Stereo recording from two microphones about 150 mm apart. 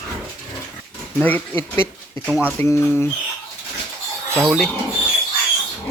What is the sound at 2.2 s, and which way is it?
Speech, 10° right (ahead or behind).